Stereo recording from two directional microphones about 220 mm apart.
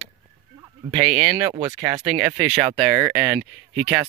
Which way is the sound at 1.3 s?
20° right (ahead or behind).